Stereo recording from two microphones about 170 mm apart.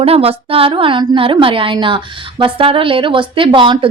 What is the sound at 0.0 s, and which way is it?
A woman's voice, 35° right (ahead or behind).